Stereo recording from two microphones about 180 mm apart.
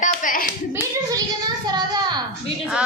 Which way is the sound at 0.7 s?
20° right (ahead or behind).